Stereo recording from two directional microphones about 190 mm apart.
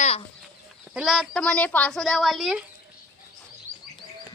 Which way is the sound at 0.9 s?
5° right (ahead or behind).